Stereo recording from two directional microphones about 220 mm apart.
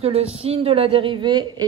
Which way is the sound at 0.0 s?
25° right (ahead or behind).